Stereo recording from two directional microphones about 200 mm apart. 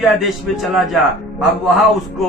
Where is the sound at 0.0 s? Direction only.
Centre (ahead or behind).